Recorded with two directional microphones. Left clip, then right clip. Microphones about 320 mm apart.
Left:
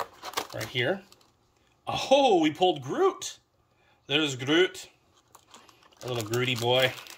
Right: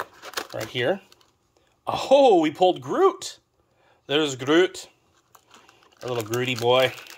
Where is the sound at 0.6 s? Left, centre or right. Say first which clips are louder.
Right 5 dB; centre.